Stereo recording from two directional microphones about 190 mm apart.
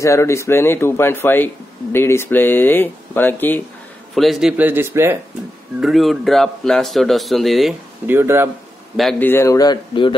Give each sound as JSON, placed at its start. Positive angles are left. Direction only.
{"t": 0.0, "sound": "a man's voice", "side_deg": 15}
{"t": 5.8, "sound": "speech", "side_deg": 0}
{"t": 8.1, "sound": "a man's voice", "side_deg": -10}
{"t": 8.9, "sound": "speech", "side_deg": 0}
{"t": 9.3, "sound": "a man's voice", "side_deg": 15}